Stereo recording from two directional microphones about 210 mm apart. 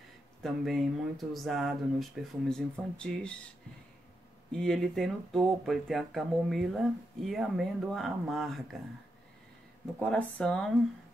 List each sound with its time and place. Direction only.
0.4 s speech: centre (ahead or behind)
4.5 s speech: 5° left (ahead or behind)
9.9 s speech: 5° left (ahead or behind)